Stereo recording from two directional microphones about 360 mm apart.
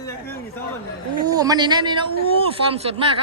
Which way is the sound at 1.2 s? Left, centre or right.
Centre.